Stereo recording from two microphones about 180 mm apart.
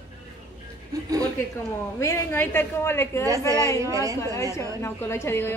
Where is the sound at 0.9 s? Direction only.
20° right (ahead or behind).